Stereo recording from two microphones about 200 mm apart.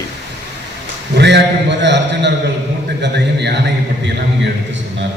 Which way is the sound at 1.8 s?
60° right (ahead or behind).